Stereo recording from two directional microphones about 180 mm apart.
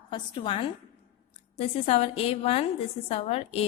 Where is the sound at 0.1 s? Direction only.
25° left (ahead or behind).